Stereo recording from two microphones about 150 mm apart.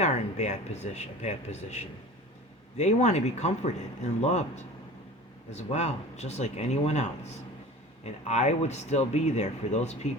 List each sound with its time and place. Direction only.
0.0 s speech: 50° left (ahead or behind)